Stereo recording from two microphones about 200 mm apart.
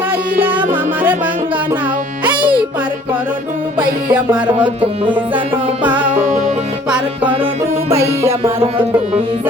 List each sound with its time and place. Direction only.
0.1 s music: 10° right (ahead or behind)
4.1 s music: 5° right (ahead or behind)
4.5 s music: 25° right (ahead or behind)
5.8 s music: 10° right (ahead or behind)
6.2 s music: 40° right (ahead or behind)
7.9 s music: 15° right (ahead or behind)